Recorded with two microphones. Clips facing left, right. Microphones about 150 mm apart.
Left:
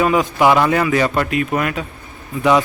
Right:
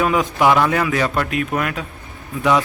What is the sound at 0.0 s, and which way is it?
Speech, centre (ahead or behind).